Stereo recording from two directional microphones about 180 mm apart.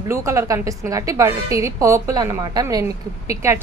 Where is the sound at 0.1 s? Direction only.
15° right (ahead or behind).